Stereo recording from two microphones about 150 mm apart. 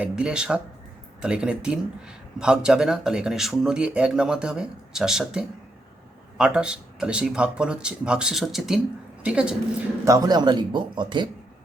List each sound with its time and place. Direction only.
0.0 s speech: 5° right (ahead or behind)
10.1 s speech: 25° right (ahead or behind)